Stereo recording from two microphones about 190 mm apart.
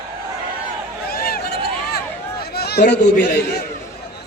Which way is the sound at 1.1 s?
55° left (ahead or behind).